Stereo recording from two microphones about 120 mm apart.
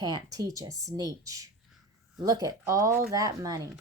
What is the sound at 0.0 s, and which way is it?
A woman's voice, 35° right (ahead or behind).